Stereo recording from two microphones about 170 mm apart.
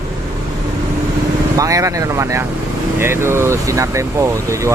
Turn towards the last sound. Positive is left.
turn(degrees=-15)  # may be behind; listen again after turning